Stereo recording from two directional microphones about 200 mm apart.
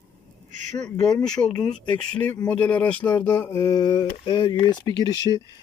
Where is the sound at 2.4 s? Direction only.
10° left (ahead or behind).